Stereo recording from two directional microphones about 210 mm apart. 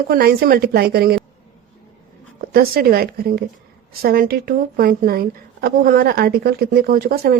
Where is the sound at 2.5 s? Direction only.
45° right (ahead or behind).